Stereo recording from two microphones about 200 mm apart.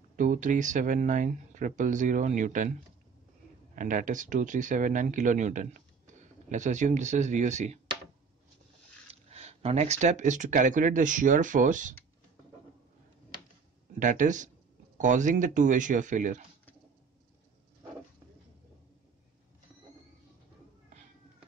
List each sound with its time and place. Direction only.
0.1 s speech: 40° right (ahead or behind)
3.7 s speech: 40° right (ahead or behind)
9.3 s speech: 30° right (ahead or behind)
13.9 s speech: 40° right (ahead or behind)